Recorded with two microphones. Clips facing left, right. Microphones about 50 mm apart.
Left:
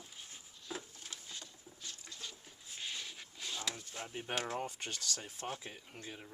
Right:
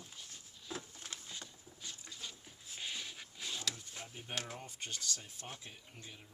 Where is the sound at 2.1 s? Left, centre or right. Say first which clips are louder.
Even; centre.